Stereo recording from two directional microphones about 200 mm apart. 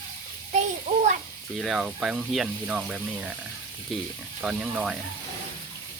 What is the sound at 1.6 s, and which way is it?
Speech, 5° right (ahead or behind).